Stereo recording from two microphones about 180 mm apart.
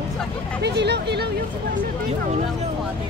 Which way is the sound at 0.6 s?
70° right (ahead or behind).